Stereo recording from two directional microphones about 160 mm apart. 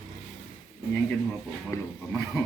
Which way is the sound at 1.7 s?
20° left (ahead or behind).